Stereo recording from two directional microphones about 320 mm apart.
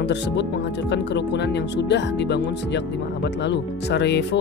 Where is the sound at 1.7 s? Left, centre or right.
Left.